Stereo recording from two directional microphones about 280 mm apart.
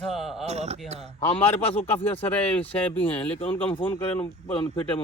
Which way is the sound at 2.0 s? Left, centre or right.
Centre.